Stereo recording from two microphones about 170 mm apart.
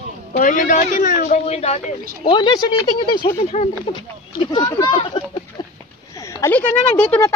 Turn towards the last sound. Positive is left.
turn(degrees=10)  # may be behind; listen again after turning